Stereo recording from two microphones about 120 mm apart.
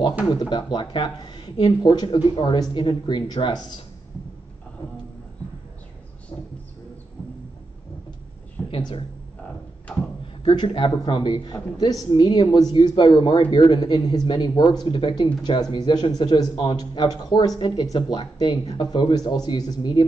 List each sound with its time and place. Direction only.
0.3 s a man's voice: 35° left (ahead or behind)
6.3 s a sound: 45° left (ahead or behind)
8.6 s speech: 45° left (ahead or behind)
10.2 s a man's voice: 45° left (ahead or behind)